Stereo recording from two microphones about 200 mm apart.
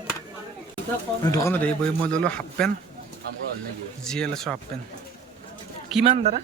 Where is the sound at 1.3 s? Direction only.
10° left (ahead or behind).